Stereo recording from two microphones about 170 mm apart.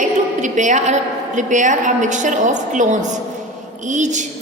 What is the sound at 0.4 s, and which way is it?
A woman's voice, 45° right (ahead or behind).